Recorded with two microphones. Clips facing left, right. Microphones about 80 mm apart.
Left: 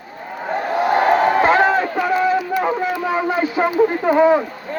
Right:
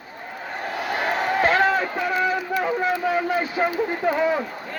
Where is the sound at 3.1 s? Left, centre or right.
Centre.